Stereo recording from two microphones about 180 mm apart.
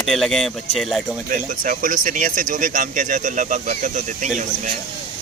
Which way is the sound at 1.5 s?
50° right (ahead or behind).